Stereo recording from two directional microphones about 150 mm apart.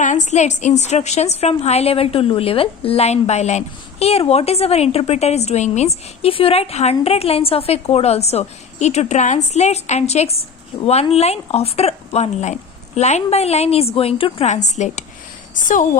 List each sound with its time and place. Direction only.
0.0 s a woman's voice: 55° left (ahead or behind)